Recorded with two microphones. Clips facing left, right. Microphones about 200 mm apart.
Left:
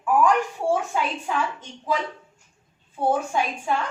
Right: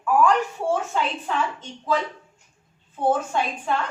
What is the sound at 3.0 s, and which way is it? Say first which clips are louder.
Speech: even; 10° left (ahead or behind).